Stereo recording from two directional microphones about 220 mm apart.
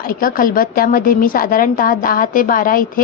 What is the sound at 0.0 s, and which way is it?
A woman's voice, 40° left (ahead or behind).